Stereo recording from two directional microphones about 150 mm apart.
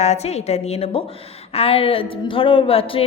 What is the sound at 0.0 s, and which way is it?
A woman's voice, 45° left (ahead or behind).